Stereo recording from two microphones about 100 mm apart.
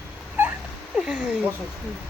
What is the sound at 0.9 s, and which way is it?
Speech, 5° right (ahead or behind).